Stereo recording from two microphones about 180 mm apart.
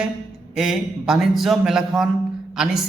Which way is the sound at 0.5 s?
Centre (ahead or behind).